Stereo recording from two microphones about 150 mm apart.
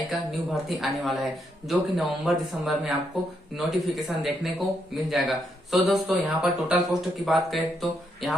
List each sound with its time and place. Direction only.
0.1 s speech: centre (ahead or behind)